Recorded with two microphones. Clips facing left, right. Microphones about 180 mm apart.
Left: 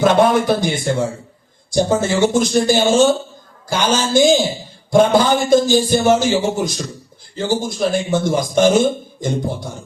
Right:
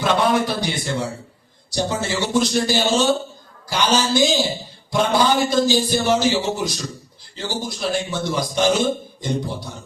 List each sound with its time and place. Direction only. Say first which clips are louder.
0.0 s a man's voice: left 5 dB; 50° left (ahead or behind)